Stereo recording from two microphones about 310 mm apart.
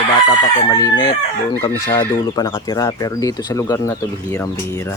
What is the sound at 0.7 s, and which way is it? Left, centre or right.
Speech, centre.